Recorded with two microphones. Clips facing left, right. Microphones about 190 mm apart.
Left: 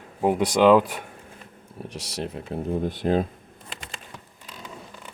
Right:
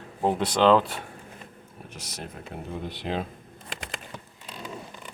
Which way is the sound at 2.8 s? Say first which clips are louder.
Left 7 dB; 45° left (ahead or behind).